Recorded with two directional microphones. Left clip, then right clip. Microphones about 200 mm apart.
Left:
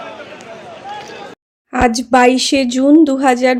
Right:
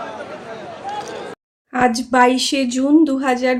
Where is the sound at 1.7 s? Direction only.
35° left (ahead or behind).